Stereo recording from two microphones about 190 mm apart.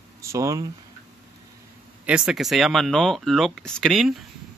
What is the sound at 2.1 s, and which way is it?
Speech, 5° right (ahead or behind).